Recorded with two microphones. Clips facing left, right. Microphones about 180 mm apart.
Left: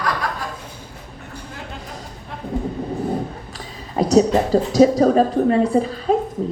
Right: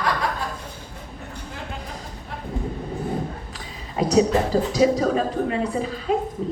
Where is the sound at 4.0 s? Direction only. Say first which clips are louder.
Left 3 dB; 35° left (ahead or behind).